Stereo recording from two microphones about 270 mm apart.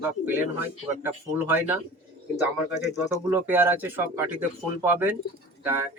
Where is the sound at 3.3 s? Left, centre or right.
Centre.